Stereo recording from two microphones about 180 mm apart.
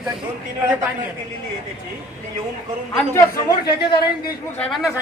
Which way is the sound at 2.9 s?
15° left (ahead or behind).